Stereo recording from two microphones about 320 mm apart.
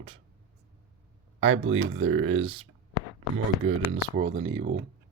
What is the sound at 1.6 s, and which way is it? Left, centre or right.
Speech, right.